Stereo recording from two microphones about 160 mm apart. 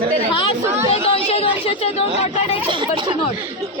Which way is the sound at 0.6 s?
15° right (ahead or behind).